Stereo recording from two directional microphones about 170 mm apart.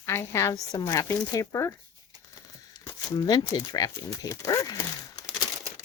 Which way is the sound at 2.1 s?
20° right (ahead or behind).